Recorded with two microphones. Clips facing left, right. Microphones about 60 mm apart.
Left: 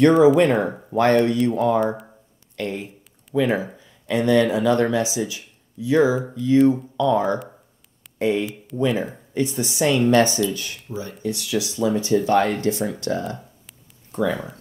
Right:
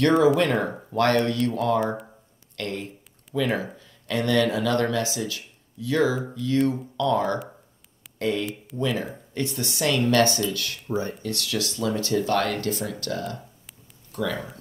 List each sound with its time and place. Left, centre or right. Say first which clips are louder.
0.4 s speech: left 5 dB; centre
10.9 s speech: right 5 dB; right
11.2 s speech: left 4 dB; centre